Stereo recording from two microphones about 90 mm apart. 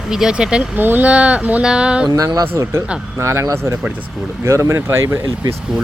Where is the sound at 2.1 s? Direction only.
45° right (ahead or behind).